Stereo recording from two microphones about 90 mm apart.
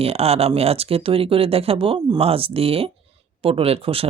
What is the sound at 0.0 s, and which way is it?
Speech, 90° right.